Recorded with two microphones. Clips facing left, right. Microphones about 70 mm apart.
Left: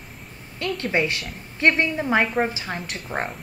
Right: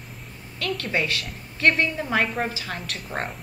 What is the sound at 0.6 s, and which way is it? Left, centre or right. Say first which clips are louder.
A woman's voice: left 3 dB; left.